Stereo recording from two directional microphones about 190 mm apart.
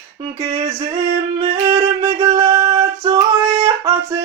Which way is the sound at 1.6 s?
15° right (ahead or behind).